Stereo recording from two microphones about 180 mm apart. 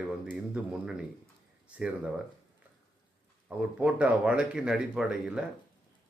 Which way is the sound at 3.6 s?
5° right (ahead or behind).